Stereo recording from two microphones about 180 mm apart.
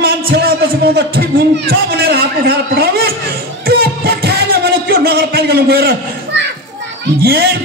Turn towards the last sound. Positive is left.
turn(degrees=-65)  # may be behind; listen again after turning